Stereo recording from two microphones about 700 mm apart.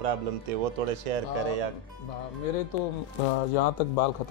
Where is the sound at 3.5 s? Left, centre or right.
Left.